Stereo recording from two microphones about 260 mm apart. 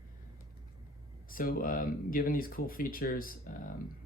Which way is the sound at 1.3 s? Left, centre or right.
Left.